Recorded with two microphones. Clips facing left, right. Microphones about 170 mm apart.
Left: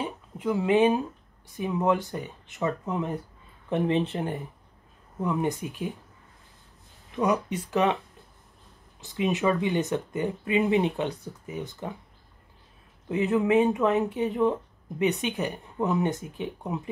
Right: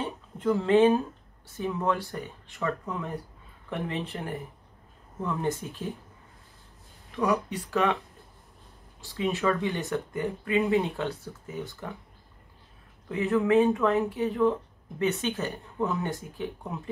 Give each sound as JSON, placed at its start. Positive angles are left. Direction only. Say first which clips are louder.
{"t": 0.0, "sound": "a sound", "louder": "right 1 dB", "side_deg": 10}
{"t": 1.6, "sound": "speech", "louder": "left 3 dB", "side_deg": 20}
{"t": 7.2, "sound": "speech", "louder": "left 1 dB", "side_deg": 20}
{"t": 9.0, "sound": "speech", "louder": "left 2 dB", "side_deg": 20}
{"t": 13.1, "sound": "speech", "louder": "left 1 dB", "side_deg": 20}